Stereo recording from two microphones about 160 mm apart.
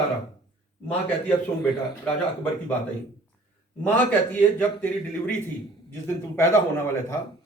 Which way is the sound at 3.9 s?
10° left (ahead or behind).